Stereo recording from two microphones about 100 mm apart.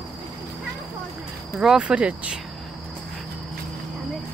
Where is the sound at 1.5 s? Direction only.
10° right (ahead or behind).